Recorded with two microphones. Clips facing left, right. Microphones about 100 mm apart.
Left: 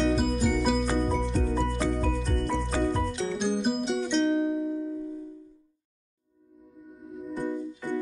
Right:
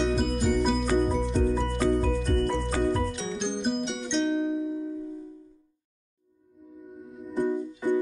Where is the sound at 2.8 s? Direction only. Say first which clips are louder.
Even; centre (ahead or behind).